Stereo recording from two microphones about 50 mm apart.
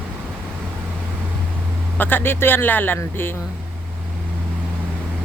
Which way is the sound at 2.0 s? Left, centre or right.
Left.